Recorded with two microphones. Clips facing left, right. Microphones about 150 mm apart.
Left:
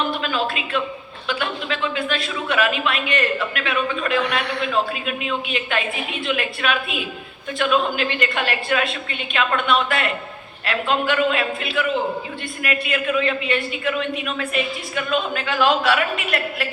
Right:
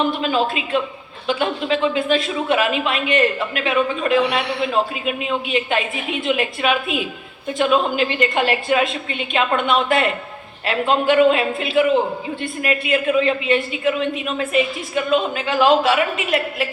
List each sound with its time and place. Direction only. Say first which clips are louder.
0.2 s speech: right 4 dB; 25° right (ahead or behind)